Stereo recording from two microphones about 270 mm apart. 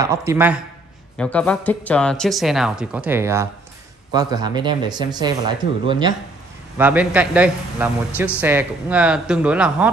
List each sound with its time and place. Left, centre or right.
0.0 s speech: centre
1.1 s speech: centre
6.8 s speech: centre